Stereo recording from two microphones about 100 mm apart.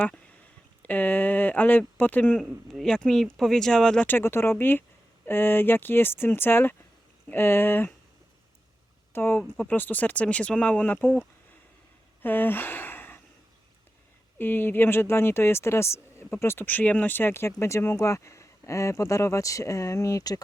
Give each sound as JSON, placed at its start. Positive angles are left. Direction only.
{"t": 0.8, "sound": "speech", "side_deg": 15}
{"t": 2.4, "sound": "speech", "side_deg": 5}
{"t": 4.0, "sound": "speech", "side_deg": 20}
{"t": 9.1, "sound": "speech", "side_deg": 25}
{"t": 12.2, "sound": "speech", "side_deg": 20}
{"t": 14.3, "sound": "speech", "side_deg": 20}